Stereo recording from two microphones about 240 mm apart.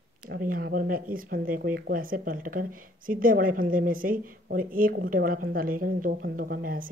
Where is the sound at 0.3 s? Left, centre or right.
Right.